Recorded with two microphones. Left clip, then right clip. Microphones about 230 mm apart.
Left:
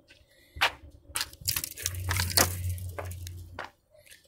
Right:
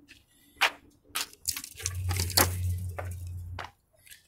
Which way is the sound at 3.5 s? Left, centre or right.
Centre.